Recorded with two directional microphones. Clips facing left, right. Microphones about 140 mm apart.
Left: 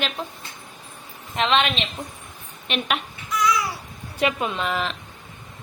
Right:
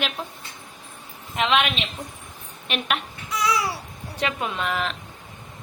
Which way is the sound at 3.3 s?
35° right (ahead or behind).